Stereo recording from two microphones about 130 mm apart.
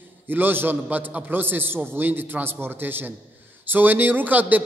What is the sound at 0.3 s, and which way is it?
A man's voice, 15° right (ahead or behind).